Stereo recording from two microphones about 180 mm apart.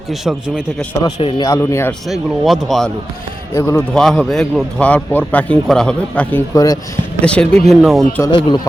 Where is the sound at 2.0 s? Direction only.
Centre (ahead or behind).